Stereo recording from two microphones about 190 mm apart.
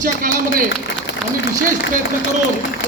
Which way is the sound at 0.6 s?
75° left (ahead or behind).